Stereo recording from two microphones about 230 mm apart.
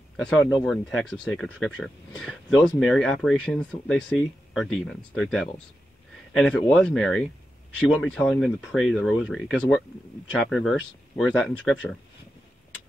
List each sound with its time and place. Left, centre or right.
0.2 s speech: centre